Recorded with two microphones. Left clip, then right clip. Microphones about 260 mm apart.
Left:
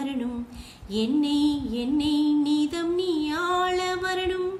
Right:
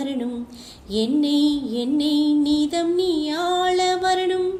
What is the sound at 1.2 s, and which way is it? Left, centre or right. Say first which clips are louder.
Music: right 4 dB; left.